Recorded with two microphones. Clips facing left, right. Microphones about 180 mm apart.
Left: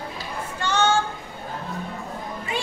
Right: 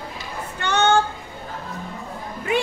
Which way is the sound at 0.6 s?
60° right (ahead or behind).